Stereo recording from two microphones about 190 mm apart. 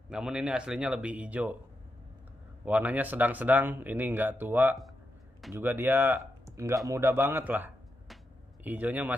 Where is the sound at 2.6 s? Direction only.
10° right (ahead or behind).